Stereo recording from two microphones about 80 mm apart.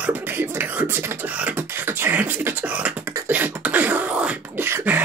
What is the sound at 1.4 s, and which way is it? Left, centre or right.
Beatboxing, right.